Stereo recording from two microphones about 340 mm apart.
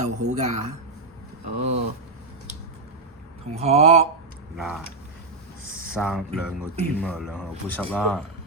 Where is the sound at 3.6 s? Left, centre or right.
Centre.